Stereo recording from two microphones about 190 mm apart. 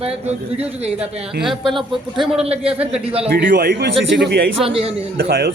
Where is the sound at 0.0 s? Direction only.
30° right (ahead or behind).